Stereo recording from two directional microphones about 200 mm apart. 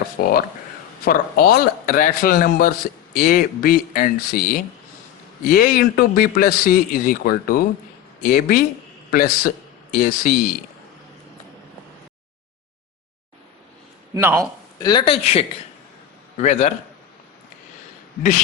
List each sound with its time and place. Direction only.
0.2 s a man's voice: 50° left (ahead or behind)
14.1 s a man's voice: 15° right (ahead or behind)
14.8 s a man's voice: 20° left (ahead or behind)